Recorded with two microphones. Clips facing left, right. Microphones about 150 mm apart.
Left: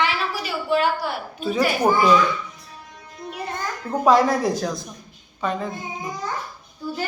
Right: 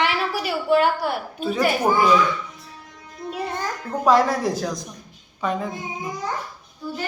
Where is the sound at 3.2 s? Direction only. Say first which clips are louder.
Right 3 dB; 25° right (ahead or behind).